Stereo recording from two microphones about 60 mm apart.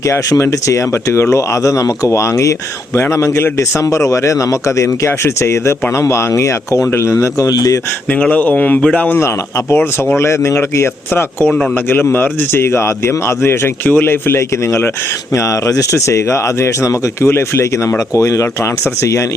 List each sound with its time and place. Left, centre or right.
0.1 s speech: left
3.9 s speech: left
4.8 s speech: left
7.4 s speech: left
8.2 s speech: left
9.1 s a man's voice: left
15.6 s speech: left
18.1 s speech: left